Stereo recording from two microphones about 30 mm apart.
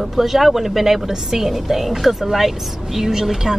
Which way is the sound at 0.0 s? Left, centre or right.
Centre.